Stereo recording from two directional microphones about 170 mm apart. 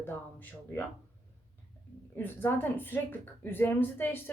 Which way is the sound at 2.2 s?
10° left (ahead or behind).